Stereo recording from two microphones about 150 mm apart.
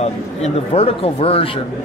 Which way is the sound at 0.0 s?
45° left (ahead or behind).